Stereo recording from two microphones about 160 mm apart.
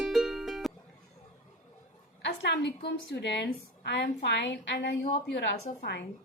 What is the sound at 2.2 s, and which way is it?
A woman's voice, 90° left.